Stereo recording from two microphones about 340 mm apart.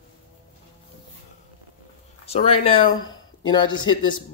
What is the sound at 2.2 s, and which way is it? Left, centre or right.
Speech, centre.